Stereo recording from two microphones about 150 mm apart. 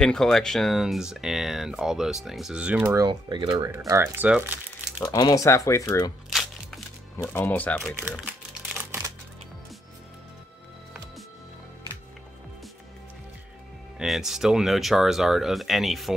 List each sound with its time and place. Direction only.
0.0 s speech: 5° left (ahead or behind)
3.1 s speech: 30° right (ahead or behind); by 5.0 s 10° right (ahead or behind)
5.0 s speech: 25° left (ahead or behind)
7.3 s speech: 10° left (ahead or behind)
8.7 s typewriter: 10° right (ahead or behind)
13.9 s speech: centre (ahead or behind)